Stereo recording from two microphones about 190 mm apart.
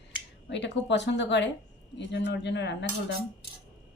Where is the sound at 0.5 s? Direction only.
65° left (ahead or behind).